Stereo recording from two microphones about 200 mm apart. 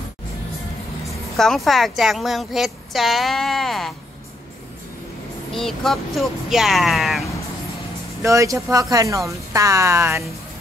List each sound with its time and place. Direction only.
1.0 s a woman's voice: centre (ahead or behind)
5.5 s a woman's voice: centre (ahead or behind)
8.2 s speech: 15° right (ahead or behind)